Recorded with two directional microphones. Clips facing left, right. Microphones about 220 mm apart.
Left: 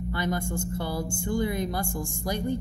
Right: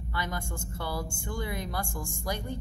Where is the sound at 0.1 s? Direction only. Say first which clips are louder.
Left 6 dB; 50° left (ahead or behind).